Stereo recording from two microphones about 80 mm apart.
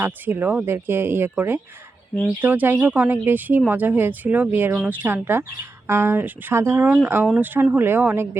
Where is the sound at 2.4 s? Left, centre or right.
Right.